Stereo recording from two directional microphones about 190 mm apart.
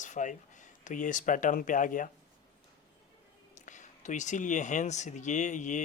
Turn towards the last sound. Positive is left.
turn(degrees=40)  # may be behind; listen again after turning